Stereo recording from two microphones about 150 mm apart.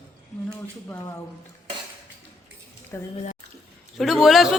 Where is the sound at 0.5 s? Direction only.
20° left (ahead or behind).